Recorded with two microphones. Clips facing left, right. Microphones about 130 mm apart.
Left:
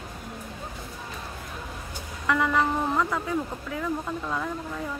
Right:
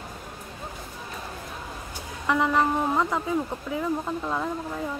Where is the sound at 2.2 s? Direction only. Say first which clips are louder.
Right 1 dB; 20° right (ahead or behind).